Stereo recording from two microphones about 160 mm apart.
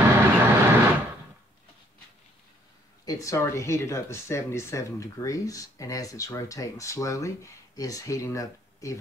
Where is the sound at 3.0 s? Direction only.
20° left (ahead or behind).